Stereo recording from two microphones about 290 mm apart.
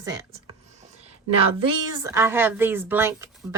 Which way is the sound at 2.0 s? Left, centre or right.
Centre.